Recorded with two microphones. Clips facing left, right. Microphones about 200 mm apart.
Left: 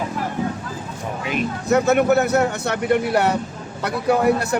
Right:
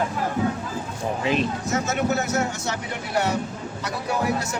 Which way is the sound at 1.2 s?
30° right (ahead or behind).